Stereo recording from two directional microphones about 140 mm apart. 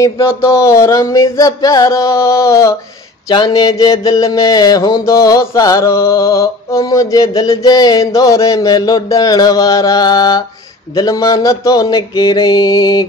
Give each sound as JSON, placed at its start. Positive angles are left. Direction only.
{"t": 0.0, "sound": "mantra", "side_deg": 20}